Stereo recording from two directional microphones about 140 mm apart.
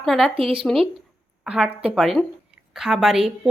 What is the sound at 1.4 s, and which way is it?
A woman's voice, 5° right (ahead or behind).